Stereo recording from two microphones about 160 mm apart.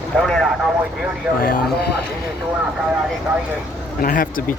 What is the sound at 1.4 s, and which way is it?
Speech, 65° left (ahead or behind).